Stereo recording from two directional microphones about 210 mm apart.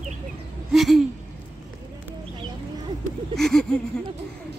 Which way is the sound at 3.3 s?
Centre (ahead or behind).